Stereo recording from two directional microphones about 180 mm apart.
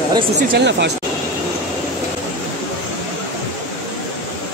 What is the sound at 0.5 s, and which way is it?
Speech, 75° right (ahead or behind).